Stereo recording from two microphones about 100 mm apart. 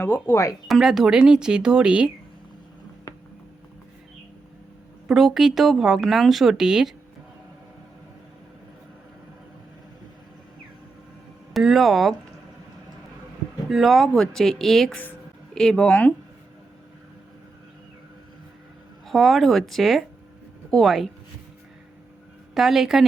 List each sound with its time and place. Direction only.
0.0 s speech: 25° left (ahead or behind)
0.7 s speech: 5° right (ahead or behind)
5.0 s speech: 5° right (ahead or behind)
11.5 s speech: centre (ahead or behind)
13.7 s speech: centre (ahead or behind)
19.0 s speech: centre (ahead or behind)
22.5 s speech: 5° right (ahead or behind)